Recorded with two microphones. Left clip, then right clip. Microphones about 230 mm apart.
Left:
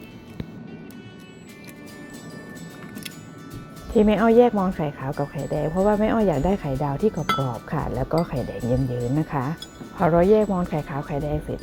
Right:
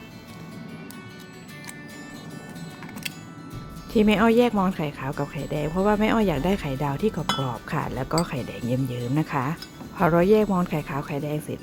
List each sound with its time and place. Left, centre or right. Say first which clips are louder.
3.9 s speech: left 3 dB; centre
10.0 s speech: left 2 dB; centre